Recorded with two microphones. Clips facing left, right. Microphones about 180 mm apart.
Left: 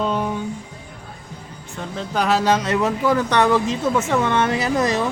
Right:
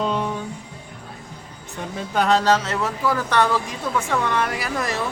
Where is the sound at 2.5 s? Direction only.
20° left (ahead or behind).